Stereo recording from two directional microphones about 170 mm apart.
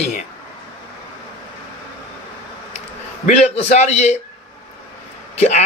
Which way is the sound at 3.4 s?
40° left (ahead or behind).